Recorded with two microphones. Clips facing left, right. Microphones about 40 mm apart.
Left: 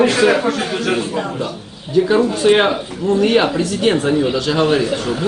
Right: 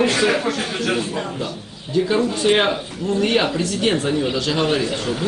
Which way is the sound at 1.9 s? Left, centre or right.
Centre.